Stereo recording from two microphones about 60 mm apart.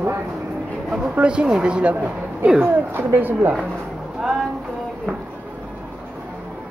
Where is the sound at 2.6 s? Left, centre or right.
Right.